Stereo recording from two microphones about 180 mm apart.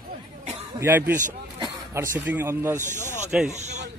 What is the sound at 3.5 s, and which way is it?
Speech, 40° right (ahead or behind).